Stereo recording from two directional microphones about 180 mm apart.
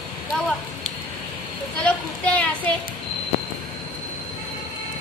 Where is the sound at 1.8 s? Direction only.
5° left (ahead or behind).